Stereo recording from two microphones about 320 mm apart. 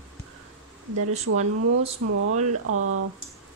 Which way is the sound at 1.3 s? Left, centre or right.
Right.